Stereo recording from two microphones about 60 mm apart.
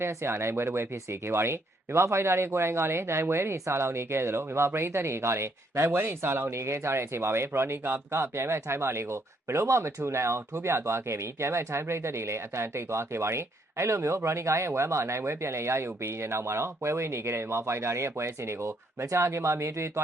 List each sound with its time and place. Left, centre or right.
0.0 s speech: right